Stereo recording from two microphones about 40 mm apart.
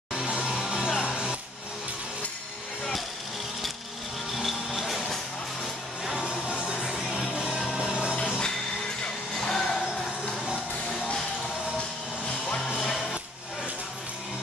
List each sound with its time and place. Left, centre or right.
0.3 s music: centre
4.3 s music: centre
6.7 s music: centre
7.3 s music: right
9.4 s music: centre
12.7 s music: centre